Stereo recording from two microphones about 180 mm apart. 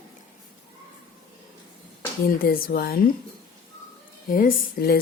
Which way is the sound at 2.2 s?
55° left (ahead or behind).